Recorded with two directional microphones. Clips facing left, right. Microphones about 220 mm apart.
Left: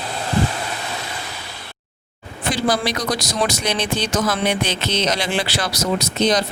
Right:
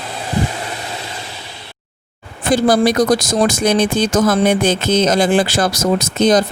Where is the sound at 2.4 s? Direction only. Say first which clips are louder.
Right 8 dB; 50° right (ahead or behind).